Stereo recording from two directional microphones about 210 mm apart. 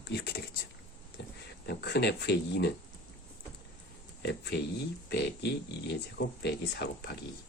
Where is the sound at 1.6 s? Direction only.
50° left (ahead or behind).